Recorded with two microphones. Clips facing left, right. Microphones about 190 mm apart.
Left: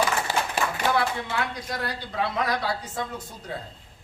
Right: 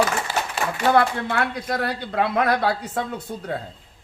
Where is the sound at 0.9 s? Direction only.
60° right (ahead or behind).